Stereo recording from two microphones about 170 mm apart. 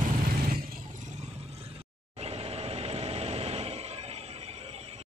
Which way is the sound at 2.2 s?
35° right (ahead or behind).